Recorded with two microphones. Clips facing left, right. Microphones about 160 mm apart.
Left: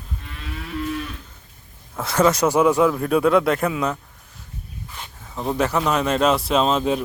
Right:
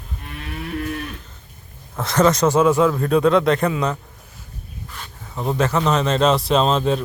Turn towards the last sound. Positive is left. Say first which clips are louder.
# right 1 dB
turn(degrees=10)  # may be behind; listen again after turning